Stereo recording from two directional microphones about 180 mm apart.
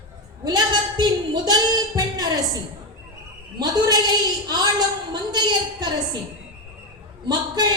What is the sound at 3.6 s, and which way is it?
A woman's voice, 25° right (ahead or behind).